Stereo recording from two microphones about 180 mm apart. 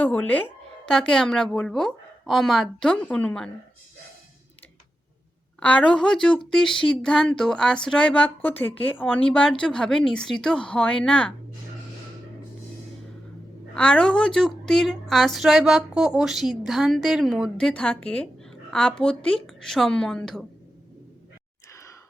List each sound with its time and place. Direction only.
0.0 s a woman's voice: 10° left (ahead or behind)
5.5 s a woman's voice: 5° left (ahead or behind)
13.7 s a woman's voice: 5° left (ahead or behind)
21.7 s sigh: 15° left (ahead or behind)